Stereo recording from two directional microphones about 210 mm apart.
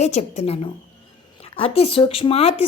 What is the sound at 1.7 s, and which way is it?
Speech, 25° left (ahead or behind).